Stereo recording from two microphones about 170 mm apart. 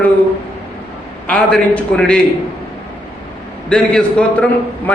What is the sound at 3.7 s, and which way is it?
Speech, 5° left (ahead or behind).